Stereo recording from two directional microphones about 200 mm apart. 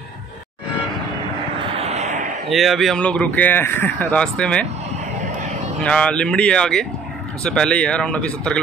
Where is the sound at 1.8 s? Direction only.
35° right (ahead or behind).